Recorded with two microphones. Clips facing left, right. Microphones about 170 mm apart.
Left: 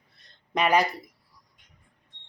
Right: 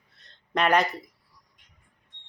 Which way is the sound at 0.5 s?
5° left (ahead or behind).